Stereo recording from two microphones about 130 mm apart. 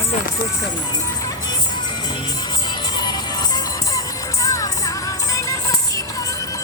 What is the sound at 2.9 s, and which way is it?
Music, 30° left (ahead or behind).